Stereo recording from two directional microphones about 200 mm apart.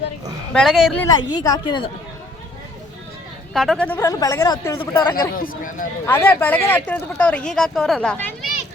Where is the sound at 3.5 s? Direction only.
Centre (ahead or behind).